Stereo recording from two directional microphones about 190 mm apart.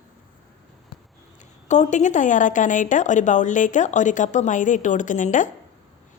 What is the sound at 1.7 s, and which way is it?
Speech, 40° left (ahead or behind).